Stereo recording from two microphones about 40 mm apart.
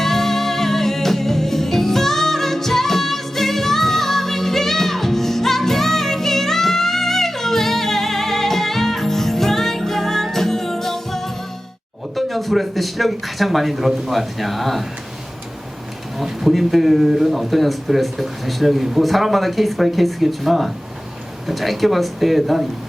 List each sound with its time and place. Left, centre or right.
0.0 s music: centre
12.1 s speech: centre
16.1 s speech: centre